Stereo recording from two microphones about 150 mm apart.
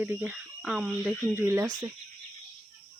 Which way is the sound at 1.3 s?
15° right (ahead or behind).